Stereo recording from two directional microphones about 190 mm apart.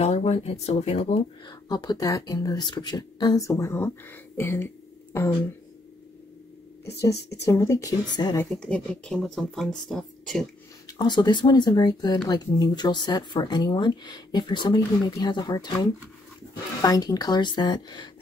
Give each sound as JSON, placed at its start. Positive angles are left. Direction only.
{"t": 0.0, "sound": "speech", "side_deg": 35}
{"t": 7.2, "sound": "speech", "side_deg": 60}
{"t": 7.4, "sound": "speech", "side_deg": 15}
{"t": 8.5, "sound": "speech", "side_deg": 5}
{"t": 10.9, "sound": "speech", "side_deg": 20}